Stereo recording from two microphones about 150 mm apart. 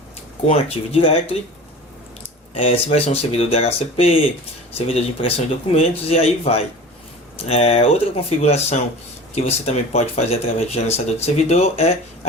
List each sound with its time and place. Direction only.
0.4 s speech: 40° left (ahead or behind)
2.6 s speech: 40° left (ahead or behind)